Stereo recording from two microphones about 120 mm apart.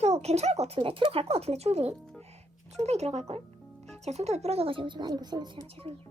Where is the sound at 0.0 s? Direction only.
60° right (ahead or behind); by 5.5 s 35° right (ahead or behind).